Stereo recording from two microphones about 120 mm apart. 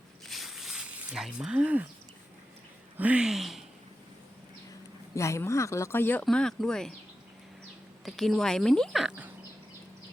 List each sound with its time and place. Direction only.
0.3 s a sound: centre (ahead or behind)
3.0 s speech: 10° right (ahead or behind)
5.1 s speech: 25° left (ahead or behind)
6.2 s speech: 5° left (ahead or behind)
8.0 s speech: centre (ahead or behind)